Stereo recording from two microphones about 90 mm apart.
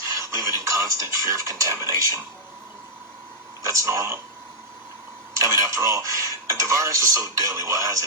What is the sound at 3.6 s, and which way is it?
Speech, 35° right (ahead or behind).